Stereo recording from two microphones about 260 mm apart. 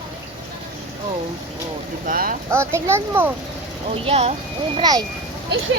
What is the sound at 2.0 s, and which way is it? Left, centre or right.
Speech, right.